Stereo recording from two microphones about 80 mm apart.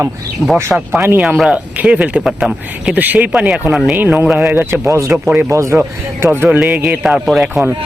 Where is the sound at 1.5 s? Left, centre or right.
Centre.